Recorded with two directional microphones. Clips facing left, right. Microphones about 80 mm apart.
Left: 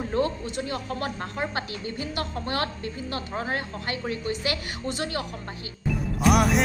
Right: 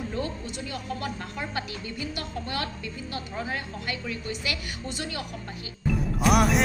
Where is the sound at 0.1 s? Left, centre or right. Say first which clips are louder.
Left 6 dB; left.